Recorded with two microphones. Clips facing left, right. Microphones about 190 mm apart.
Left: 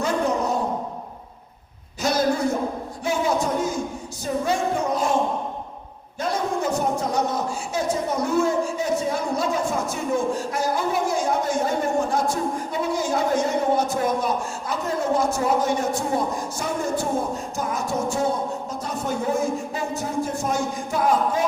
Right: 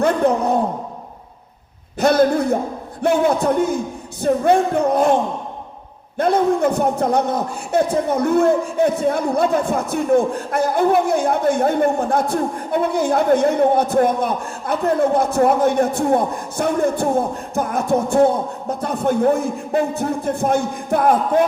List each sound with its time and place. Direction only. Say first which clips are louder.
0.0 s a sound: right 6 dB; 60° right (ahead or behind)
2.0 s a man's voice: right 7 dB; 60° right (ahead or behind)
6.1 s a man's voice: right 9 dB; 60° right (ahead or behind)